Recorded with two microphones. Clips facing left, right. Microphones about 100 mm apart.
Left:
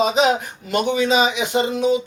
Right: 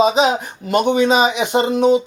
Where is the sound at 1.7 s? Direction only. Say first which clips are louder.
Right 6 dB; 60° right (ahead or behind).